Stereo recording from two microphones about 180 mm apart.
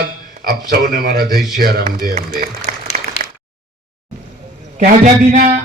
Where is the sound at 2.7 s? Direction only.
40° right (ahead or behind).